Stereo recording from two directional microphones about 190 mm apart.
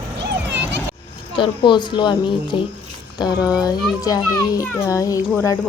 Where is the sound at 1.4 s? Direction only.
25° left (ahead or behind).